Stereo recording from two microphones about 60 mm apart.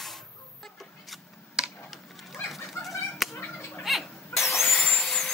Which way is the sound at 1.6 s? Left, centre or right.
Centre.